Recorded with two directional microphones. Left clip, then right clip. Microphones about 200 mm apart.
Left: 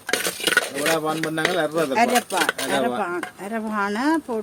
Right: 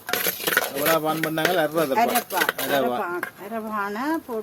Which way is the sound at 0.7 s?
10° right (ahead or behind).